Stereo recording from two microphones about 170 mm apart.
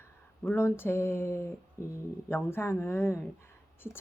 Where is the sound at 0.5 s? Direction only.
15° left (ahead or behind).